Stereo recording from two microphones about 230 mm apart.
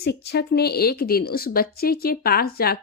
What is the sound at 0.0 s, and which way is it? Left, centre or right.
A woman's voice, left.